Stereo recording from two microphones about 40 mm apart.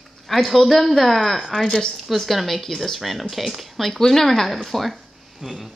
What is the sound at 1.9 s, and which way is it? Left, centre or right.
Speech, centre.